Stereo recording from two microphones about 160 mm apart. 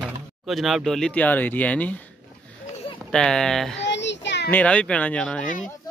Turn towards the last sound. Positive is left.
turn(degrees=5)  # may be behind; listen again after turning